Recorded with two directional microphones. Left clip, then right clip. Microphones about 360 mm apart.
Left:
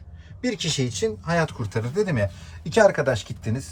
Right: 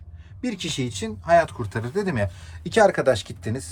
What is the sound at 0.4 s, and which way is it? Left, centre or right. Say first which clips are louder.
Speech: left 3 dB; centre.